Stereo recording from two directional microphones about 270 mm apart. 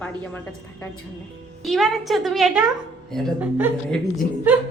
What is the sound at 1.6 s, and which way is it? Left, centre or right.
Speech, centre.